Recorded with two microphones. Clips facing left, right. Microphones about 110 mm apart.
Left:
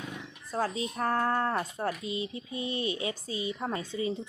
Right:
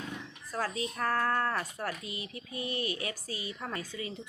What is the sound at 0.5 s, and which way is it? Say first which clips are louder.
Speech: left 3 dB; 25° left (ahead or behind).